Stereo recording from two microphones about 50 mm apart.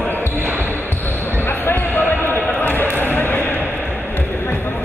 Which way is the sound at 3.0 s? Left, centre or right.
Left.